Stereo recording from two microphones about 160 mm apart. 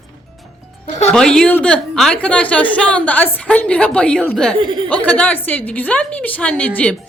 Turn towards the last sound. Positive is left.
turn(degrees=10)  # may be behind; listen again after turning